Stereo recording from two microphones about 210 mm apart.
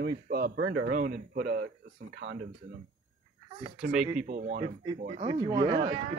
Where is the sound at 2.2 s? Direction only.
65° right (ahead or behind).